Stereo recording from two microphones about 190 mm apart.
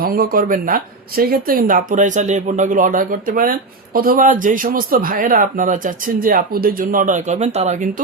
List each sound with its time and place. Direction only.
0.0 s speech: 50° right (ahead or behind)